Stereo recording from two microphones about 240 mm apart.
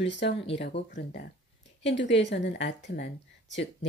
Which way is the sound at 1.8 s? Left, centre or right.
Left.